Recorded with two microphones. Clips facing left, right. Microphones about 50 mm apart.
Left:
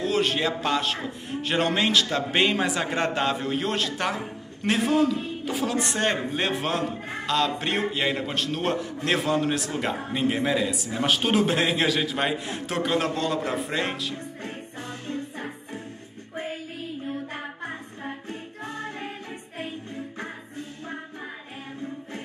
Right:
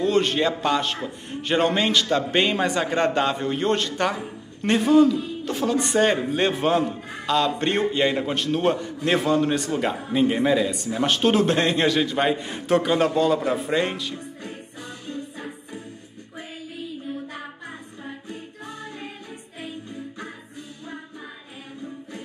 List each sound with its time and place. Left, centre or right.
0.0 s a man's voice: centre
14.4 s music: left
18.6 s music: left